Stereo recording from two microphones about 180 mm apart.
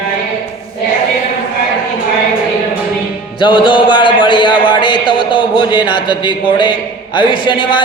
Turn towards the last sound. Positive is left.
turn(degrees=25)  # may be behind; listen again after turning